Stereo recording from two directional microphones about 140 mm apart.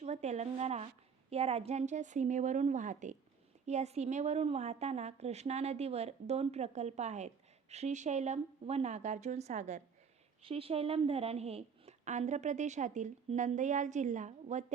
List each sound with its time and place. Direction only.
0.0 s a woman's voice: 55° right (ahead or behind)
10.4 s a woman's voice: 40° right (ahead or behind); by 14.6 s 60° right (ahead or behind)